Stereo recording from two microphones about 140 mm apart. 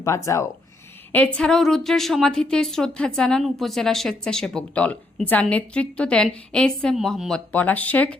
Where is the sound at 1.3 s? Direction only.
5° left (ahead or behind).